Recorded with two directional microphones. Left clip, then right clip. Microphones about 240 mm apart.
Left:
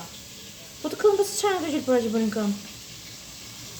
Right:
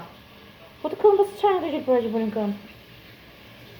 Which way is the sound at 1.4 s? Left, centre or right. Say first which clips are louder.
Right 3 dB; centre.